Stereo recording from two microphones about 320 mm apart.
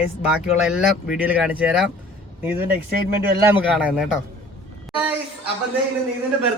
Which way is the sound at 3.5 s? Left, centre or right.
Centre.